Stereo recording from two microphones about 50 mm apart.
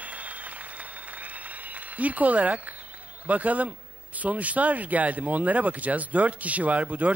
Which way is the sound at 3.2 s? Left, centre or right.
Right.